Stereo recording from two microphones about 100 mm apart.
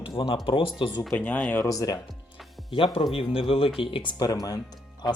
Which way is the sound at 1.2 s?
15° left (ahead or behind).